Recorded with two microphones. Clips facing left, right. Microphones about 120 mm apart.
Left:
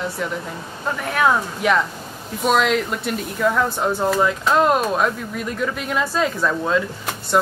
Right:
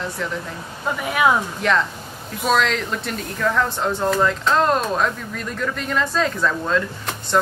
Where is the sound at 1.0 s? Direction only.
5° right (ahead or behind).